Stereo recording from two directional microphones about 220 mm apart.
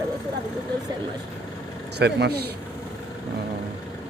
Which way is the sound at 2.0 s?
50° right (ahead or behind).